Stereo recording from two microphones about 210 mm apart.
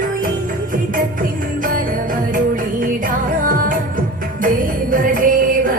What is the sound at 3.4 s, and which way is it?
Music, 40° right (ahead or behind).